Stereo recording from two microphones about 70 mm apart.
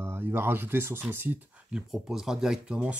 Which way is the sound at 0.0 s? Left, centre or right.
Right.